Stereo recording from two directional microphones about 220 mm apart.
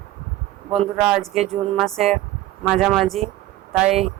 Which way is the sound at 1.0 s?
5° right (ahead or behind).